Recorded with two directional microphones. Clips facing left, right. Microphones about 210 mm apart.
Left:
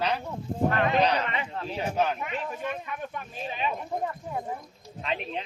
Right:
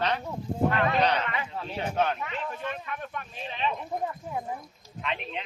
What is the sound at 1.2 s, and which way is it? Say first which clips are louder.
Speech: left 1 dB; 25° left (ahead or behind).